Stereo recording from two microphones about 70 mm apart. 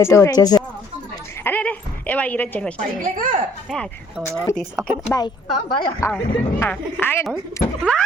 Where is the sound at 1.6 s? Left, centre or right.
Left.